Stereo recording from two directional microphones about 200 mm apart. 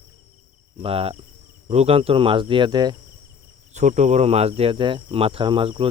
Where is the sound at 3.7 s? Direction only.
35° right (ahead or behind).